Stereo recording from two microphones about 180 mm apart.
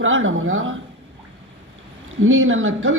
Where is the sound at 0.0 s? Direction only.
90° right.